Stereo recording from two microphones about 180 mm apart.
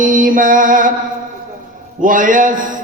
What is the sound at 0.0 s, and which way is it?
Mantra, 45° right (ahead or behind).